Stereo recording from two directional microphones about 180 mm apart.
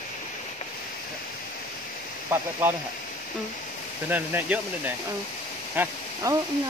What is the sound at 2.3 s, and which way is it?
Speech, 15° right (ahead or behind).